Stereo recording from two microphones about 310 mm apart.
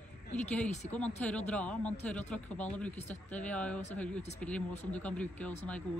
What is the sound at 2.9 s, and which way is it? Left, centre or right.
Speech, left.